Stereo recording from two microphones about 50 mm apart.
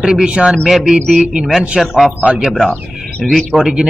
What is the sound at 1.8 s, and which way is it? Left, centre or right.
A man's voice, centre.